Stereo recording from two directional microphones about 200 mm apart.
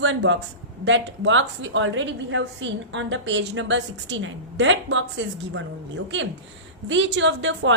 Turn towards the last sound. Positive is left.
turn(degrees=-65)  # may be behind; listen again after turning